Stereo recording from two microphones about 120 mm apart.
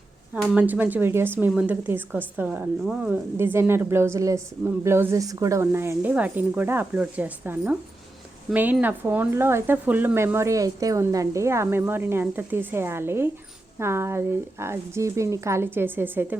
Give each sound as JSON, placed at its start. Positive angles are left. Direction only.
{"t": 0.5, "sound": "a woman's voice", "side_deg": -15}
{"t": 3.3, "sound": "speech", "side_deg": -20}